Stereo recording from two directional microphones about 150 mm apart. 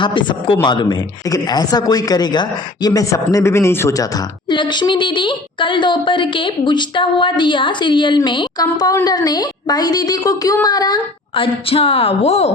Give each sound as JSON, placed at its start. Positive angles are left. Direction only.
{"t": 0.0, "sound": "a woman's voice", "side_deg": 35}